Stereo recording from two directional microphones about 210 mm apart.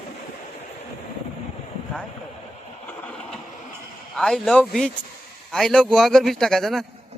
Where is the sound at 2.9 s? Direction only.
5° left (ahead or behind).